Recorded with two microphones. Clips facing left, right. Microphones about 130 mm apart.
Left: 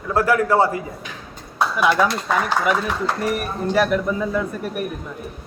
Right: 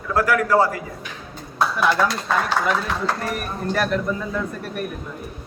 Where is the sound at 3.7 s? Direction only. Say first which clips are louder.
Left 3 dB; 5° left (ahead or behind).